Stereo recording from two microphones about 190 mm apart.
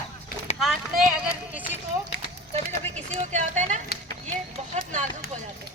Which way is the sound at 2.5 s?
35° right (ahead or behind).